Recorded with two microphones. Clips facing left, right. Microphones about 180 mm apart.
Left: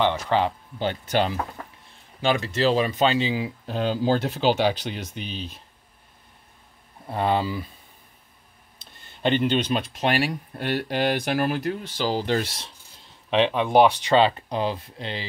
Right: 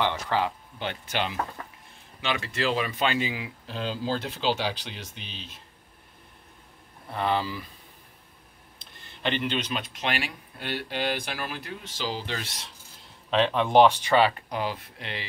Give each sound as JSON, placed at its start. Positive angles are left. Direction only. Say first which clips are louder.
{"t": 0.0, "sound": "speech", "louder": "left 4 dB", "side_deg": 20}
{"t": 0.7, "sound": "speech", "louder": "left 8 dB", "side_deg": 35}
{"t": 3.6, "sound": "speech", "louder": "left 7 dB", "side_deg": 50}
{"t": 7.1, "sound": "speech", "louder": "left 4 dB", "side_deg": 35}
{"t": 9.2, "sound": "speech", "louder": "left 7 dB", "side_deg": 40}
{"t": 13.3, "sound": "speech", "louder": "left 2 dB", "side_deg": 10}